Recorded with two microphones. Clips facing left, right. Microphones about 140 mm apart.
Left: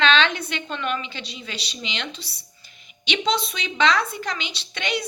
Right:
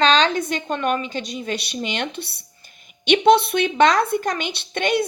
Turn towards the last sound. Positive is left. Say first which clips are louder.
# right 7 dB
turn(degrees=-50)  # may be behind; listen again after turning